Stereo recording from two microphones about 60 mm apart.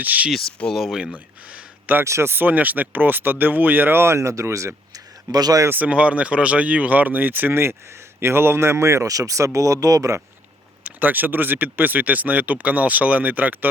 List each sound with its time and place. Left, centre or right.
0.0 s speech: right
0.3 s speech: centre
0.7 s speech: centre
1.1 s a sound: right
2.0 s speech: right
2.3 s speech: right
5.3 s speech: right
5.8 s speech: right
11.0 s speech: right